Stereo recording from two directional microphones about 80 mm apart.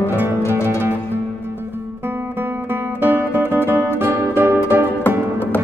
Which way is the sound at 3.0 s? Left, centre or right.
Right.